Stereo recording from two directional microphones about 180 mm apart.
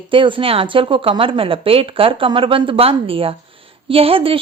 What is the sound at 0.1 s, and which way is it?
A woman's voice, 30° right (ahead or behind).